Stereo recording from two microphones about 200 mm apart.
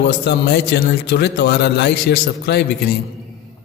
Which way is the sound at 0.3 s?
55° left (ahead or behind).